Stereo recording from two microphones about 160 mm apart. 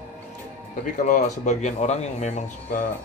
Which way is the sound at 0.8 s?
50° left (ahead or behind).